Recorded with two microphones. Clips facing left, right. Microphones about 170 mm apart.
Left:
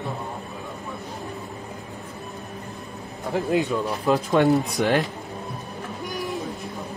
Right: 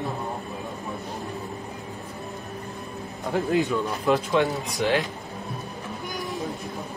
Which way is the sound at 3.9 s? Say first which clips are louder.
Left 1 dB; 40° left (ahead or behind).